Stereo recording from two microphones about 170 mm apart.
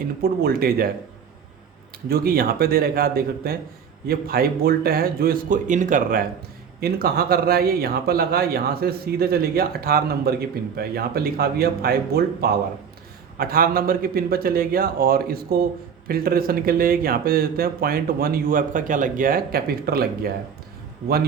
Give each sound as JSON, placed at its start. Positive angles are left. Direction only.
{"t": 0.2, "sound": "a man's voice", "side_deg": -60}
{"t": 2.0, "sound": "a man's voice", "side_deg": -65}
{"t": 6.7, "sound": "a man's voice", "side_deg": -65}